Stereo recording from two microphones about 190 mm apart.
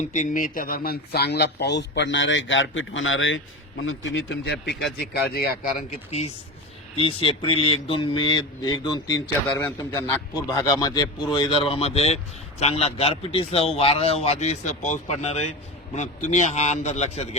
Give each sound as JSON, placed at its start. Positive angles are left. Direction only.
{"t": 0.0, "sound": "a man's voice", "side_deg": 40}
{"t": 5.1, "sound": "speech", "side_deg": 55}
{"t": 6.1, "sound": "a man's voice", "side_deg": 35}
{"t": 9.6, "sound": "a man's voice", "side_deg": 10}